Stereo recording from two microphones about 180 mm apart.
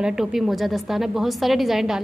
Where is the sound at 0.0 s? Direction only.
5° right (ahead or behind).